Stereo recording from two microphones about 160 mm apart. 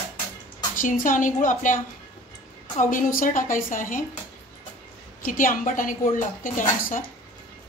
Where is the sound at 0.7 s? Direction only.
55° left (ahead or behind).